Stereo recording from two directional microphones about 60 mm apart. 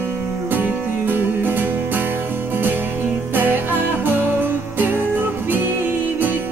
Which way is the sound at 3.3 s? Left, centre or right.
Right.